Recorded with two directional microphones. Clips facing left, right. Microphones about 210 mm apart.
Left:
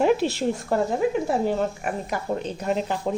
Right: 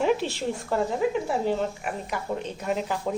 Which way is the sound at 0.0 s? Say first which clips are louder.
Left 4 dB; 40° left (ahead or behind).